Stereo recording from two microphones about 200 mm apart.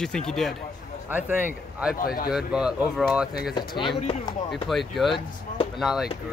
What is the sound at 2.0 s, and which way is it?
Speech, 45° left (ahead or behind).